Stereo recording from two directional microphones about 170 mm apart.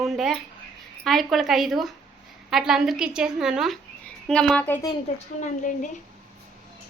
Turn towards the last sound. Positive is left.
turn(degrees=50)  # may be behind; listen again after turning